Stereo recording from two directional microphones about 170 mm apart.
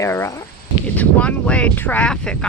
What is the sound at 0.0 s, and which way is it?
Speech, 15° left (ahead or behind).